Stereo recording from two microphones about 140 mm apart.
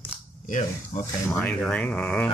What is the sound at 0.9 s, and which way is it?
Speech, 60° left (ahead or behind).